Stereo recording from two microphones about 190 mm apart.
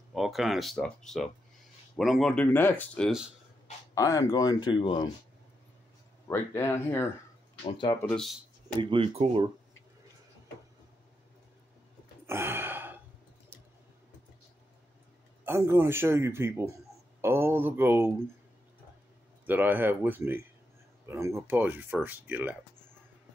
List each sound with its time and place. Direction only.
0.1 s speech: centre (ahead or behind)
3.9 s speech: 15° left (ahead or behind)
6.2 s speech: 10° left (ahead or behind)
7.6 s speech: 25° left (ahead or behind)
7.9 s speech: 10° left (ahead or behind)
8.8 s speech: 30° right (ahead or behind)
12.3 s gasp: 10° right (ahead or behind)
15.4 s a man's voice: 15° right (ahead or behind)
19.4 s a man's voice: 10° right (ahead or behind)